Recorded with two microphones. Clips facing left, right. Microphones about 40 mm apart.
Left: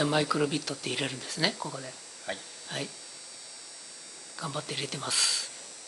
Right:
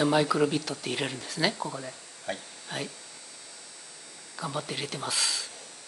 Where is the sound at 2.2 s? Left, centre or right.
Centre.